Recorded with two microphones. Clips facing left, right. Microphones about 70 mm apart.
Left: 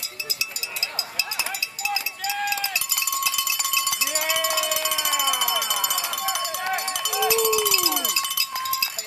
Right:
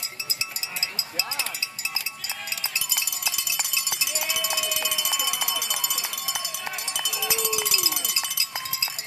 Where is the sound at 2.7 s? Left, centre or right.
Left.